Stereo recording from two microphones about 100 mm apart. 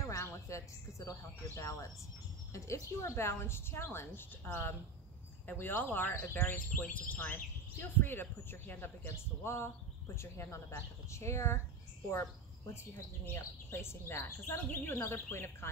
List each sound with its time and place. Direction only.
0.0 s speech: 30° left (ahead or behind)